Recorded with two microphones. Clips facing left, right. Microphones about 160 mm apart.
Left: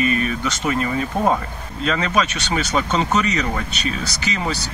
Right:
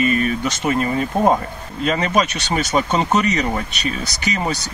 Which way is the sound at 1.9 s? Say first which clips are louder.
Right 2 dB; 40° right (ahead or behind).